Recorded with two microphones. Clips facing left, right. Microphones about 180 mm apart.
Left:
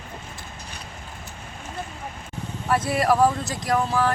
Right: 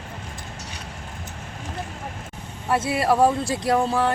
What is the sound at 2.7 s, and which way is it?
Speech, 25° right (ahead or behind).